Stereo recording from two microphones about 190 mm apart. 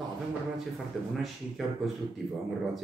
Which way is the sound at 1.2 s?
Centre (ahead or behind).